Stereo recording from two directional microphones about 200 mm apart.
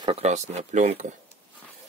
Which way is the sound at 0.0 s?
30° right (ahead or behind).